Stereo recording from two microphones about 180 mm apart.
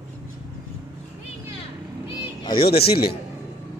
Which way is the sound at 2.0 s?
25° left (ahead or behind).